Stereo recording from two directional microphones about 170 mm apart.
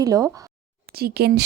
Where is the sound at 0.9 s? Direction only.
70° right (ahead or behind).